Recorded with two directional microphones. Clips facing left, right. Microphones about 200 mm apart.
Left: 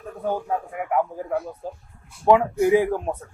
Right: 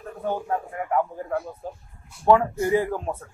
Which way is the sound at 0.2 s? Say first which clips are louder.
Left 1 dB; 10° left (ahead or behind).